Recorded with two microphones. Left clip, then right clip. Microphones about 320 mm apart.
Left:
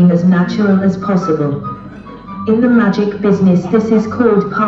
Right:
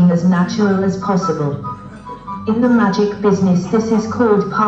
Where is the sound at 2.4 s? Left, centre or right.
Centre.